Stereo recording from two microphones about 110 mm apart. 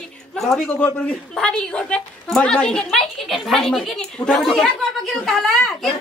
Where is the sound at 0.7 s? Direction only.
15° left (ahead or behind).